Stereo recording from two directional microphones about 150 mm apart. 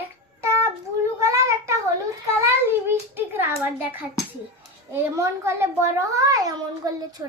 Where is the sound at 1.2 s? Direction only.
20° right (ahead or behind).